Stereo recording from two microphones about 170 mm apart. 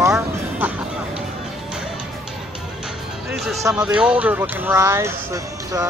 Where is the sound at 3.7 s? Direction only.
5° right (ahead or behind).